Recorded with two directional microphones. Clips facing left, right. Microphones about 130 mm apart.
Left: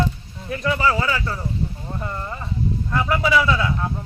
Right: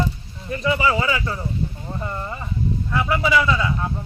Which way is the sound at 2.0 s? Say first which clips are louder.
Right 1 dB; 5° right (ahead or behind).